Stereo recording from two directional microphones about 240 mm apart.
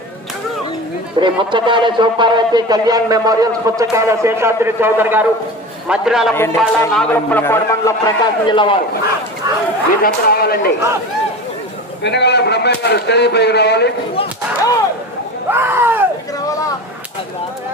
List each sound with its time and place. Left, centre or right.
1.2 s a man's voice: centre
6.3 s a man's voice: centre
10.0 s speech: left
12.0 s speech: left
15.4 s a sound: centre